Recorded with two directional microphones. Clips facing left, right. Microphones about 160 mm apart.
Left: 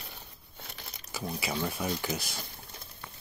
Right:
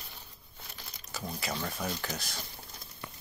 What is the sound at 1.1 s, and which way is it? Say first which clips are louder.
Speech: left 3 dB; 5° left (ahead or behind).